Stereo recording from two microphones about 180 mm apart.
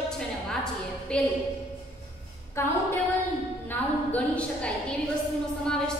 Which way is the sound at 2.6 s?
15° left (ahead or behind).